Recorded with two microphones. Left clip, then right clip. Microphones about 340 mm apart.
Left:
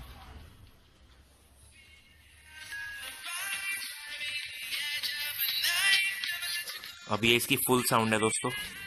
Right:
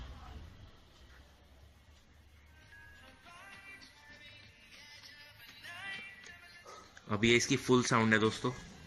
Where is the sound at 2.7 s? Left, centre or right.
Left.